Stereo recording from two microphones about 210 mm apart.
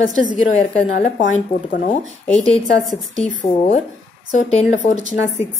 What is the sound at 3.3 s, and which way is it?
A woman's voice, 40° left (ahead or behind).